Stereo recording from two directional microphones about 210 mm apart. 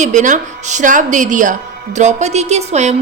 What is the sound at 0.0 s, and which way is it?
A woman's voice, 35° right (ahead or behind).